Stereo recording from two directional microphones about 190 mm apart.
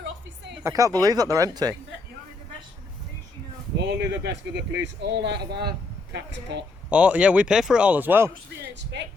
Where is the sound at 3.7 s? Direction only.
65° right (ahead or behind).